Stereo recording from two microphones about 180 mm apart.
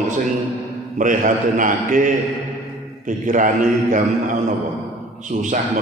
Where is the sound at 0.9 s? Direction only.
45° right (ahead or behind).